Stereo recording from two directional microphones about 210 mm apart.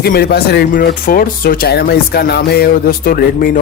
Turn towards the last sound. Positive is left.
turn(degrees=45)  # may be behind; listen again after turning